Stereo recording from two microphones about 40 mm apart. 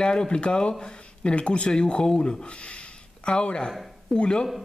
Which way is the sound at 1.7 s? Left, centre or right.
Centre.